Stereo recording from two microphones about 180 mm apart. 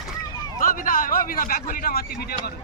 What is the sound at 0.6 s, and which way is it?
A man's voice, 50° left (ahead or behind).